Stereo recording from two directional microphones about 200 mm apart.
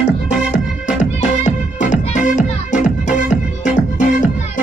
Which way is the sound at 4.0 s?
40° left (ahead or behind).